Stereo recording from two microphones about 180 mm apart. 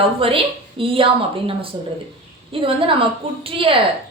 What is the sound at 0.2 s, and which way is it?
Speech, 30° right (ahead or behind).